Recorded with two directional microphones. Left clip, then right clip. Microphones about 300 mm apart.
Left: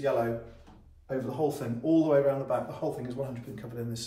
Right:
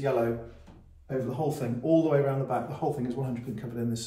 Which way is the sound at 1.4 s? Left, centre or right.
Centre.